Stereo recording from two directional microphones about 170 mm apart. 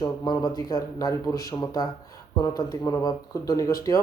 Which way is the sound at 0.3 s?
20° left (ahead or behind).